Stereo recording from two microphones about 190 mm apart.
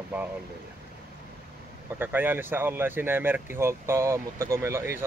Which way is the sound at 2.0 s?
10° right (ahead or behind).